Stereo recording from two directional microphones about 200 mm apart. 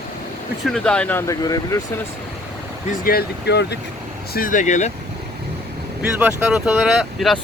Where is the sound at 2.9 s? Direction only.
50° left (ahead or behind).